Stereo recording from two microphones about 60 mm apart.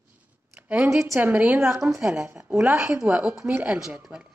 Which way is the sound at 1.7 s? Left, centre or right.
Right.